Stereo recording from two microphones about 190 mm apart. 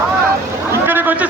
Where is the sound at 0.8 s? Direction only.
10° right (ahead or behind).